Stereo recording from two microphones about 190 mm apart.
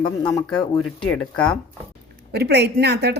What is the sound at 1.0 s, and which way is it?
Speech, 5° left (ahead or behind).